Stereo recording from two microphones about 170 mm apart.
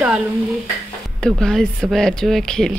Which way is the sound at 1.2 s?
5° left (ahead or behind).